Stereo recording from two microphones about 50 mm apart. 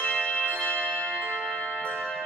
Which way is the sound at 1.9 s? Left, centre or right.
Centre.